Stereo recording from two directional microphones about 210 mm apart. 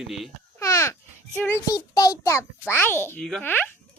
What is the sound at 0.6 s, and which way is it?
A child's voice, 15° left (ahead or behind).